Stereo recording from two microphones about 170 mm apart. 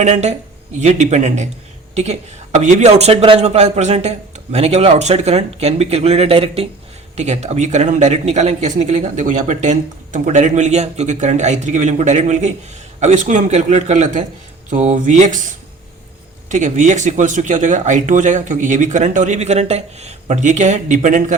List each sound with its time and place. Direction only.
0.0 s speech: 40° right (ahead or behind)